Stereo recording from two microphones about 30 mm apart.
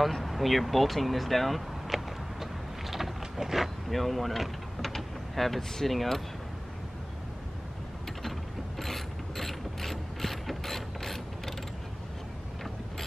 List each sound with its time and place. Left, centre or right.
0.1 s speech: centre
2.9 s a sound: centre
3.9 s speech: centre
8.2 s mechanisms: centre